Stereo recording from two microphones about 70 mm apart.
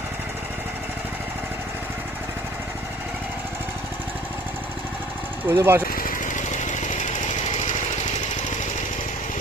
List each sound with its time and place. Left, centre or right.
5.5 s speech: right